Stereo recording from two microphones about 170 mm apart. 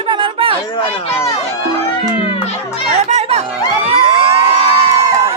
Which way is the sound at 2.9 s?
40° right (ahead or behind).